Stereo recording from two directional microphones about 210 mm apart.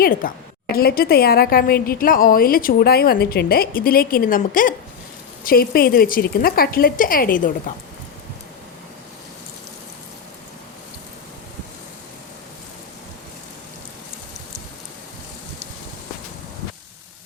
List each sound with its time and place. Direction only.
0.0 s a woman's voice: 45° left (ahead or behind)